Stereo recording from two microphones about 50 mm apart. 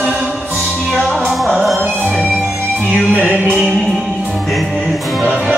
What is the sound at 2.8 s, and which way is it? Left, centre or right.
Music, right.